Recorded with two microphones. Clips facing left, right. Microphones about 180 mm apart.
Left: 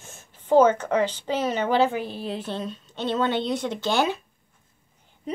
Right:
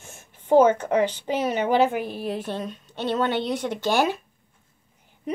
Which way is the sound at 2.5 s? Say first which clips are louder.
Right 1 dB; 15° right (ahead or behind).